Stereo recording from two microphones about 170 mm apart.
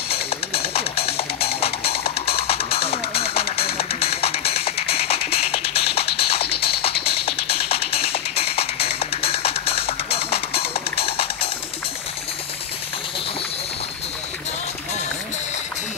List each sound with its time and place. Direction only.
0.1 s music: 35° left (ahead or behind)